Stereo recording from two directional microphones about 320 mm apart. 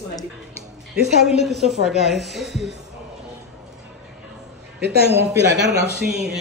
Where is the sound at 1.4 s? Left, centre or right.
Centre.